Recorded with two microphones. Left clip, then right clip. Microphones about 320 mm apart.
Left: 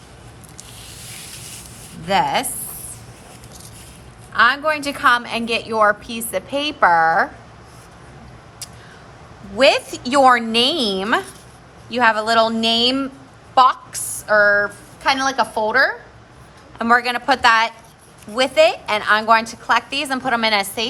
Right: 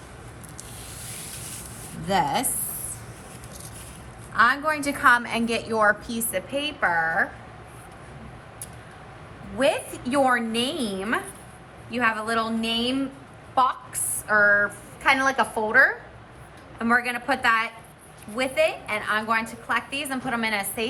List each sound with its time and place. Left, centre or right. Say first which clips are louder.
1.0 s rub: left 4 dB; centre
2.0 s a woman's voice: left 6 dB; centre
4.4 s a woman's voice: left 5 dB; centre
6.3 s a woman's voice: left 6 dB; centre
10.1 s a woman's voice: left 9 dB; centre
12.6 s a sound: left 9 dB; centre
14.3 s a woman's voice: left 5 dB; centre